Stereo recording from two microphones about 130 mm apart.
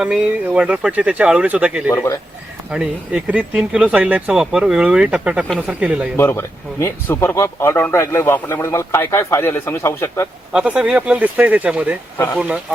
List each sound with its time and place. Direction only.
0.0 s speech: 5° right (ahead or behind)
1.9 s speech: 20° left (ahead or behind)
2.6 s speech: 10° right (ahead or behind)
6.1 s speech: 20° left (ahead or behind)
10.5 s speech: 5° right (ahead or behind)